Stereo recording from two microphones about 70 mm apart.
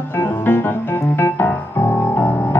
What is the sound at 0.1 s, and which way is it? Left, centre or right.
Music, left.